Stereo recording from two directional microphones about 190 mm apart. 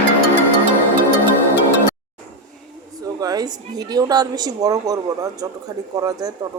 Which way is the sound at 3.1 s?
20° right (ahead or behind).